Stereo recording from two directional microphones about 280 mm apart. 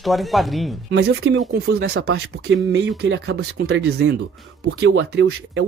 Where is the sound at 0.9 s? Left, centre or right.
Right.